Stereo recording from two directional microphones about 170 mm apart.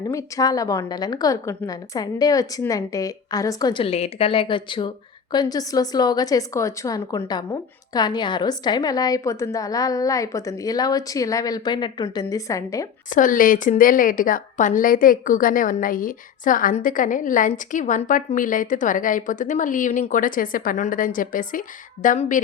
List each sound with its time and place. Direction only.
0.1 s a woman's voice: 20° left (ahead or behind)
13.1 s a woman's voice: 50° left (ahead or behind)